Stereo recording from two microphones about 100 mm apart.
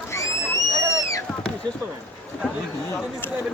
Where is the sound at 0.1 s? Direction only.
30° left (ahead or behind).